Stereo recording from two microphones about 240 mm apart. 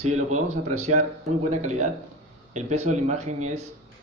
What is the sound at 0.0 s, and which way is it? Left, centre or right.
Speech, right.